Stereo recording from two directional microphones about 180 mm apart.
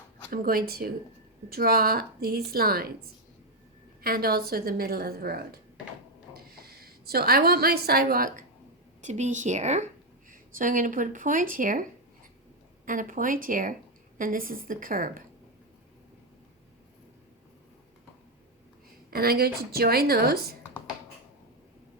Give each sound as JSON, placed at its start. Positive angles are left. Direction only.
{"t": 0.3, "sound": "a woman's voice", "side_deg": -55}
{"t": 4.0, "sound": "a woman's voice", "side_deg": -55}
{"t": 9.0, "sound": "a woman's voice", "side_deg": -40}
{"t": 19.1, "sound": "a woman's voice", "side_deg": -60}